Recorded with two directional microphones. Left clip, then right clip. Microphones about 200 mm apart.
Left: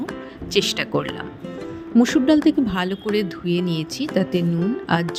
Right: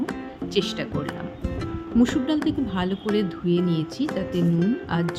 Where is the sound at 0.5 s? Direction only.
35° left (ahead or behind).